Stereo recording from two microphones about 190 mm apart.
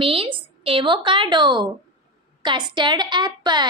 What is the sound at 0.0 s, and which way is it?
A woman's voice, 30° right (ahead or behind).